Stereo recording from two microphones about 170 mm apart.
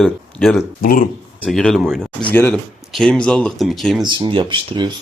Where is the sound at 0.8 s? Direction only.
55° left (ahead or behind).